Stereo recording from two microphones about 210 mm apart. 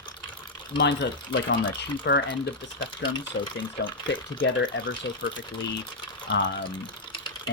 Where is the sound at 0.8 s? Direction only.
60° left (ahead or behind).